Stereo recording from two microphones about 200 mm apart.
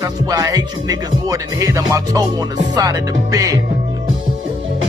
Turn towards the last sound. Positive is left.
turn(degrees=-15)  # may be behind; listen again after turning